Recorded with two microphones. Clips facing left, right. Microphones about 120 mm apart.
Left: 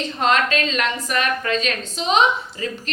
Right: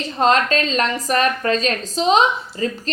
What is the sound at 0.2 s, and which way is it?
A woman's voice, 35° right (ahead or behind).